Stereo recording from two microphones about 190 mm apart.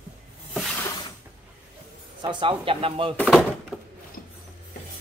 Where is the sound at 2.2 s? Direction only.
25° right (ahead or behind).